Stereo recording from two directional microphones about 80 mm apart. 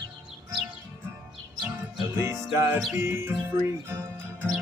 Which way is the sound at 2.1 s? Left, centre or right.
Right.